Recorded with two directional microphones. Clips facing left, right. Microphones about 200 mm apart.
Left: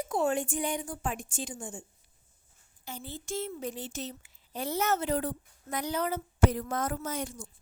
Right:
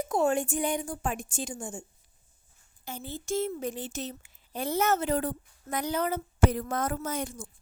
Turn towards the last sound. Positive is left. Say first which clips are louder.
# right 2 dB
turn(degrees=-55)  # may be behind; listen again after turning